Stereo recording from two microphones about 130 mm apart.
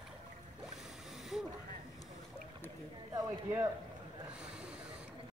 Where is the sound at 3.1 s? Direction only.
20° right (ahead or behind).